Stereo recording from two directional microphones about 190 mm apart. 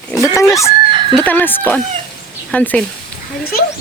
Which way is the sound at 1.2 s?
10° left (ahead or behind).